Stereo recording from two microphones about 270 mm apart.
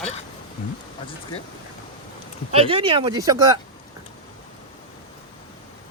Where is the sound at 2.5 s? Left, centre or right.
Centre.